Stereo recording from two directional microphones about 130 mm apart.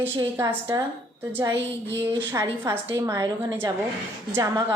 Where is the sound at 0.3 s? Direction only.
20° right (ahead or behind).